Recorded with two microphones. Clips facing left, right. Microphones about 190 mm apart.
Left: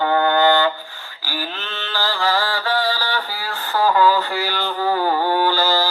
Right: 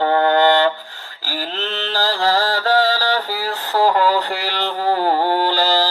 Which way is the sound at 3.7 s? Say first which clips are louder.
Even; 35° right (ahead or behind).